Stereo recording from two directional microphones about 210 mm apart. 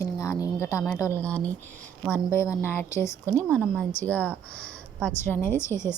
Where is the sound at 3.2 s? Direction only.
15° right (ahead or behind).